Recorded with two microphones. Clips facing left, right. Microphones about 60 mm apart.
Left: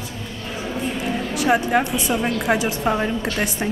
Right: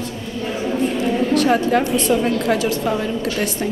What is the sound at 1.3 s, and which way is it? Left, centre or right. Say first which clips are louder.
A woman's voice: right 1 dB; centre.